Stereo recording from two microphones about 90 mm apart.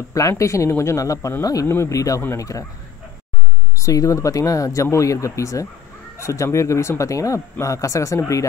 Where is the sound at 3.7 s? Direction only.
35° left (ahead or behind).